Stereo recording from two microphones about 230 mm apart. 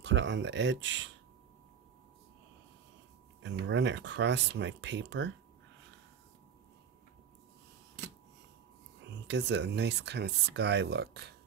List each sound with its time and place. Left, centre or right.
0.0 s speech: right
3.4 s speech: right
9.1 s speech: right